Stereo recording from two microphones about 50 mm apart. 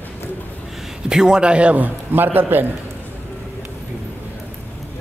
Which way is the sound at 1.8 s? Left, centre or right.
Right.